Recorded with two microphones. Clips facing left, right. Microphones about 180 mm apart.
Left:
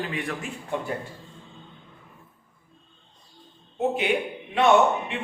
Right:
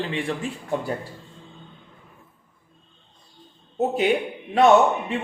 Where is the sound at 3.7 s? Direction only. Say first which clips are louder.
Right 3 dB; 40° right (ahead or behind).